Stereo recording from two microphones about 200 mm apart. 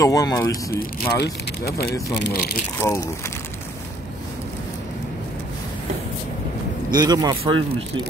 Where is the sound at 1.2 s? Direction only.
50° left (ahead or behind).